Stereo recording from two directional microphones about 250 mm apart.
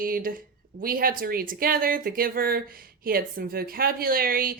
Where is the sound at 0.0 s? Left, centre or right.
Right.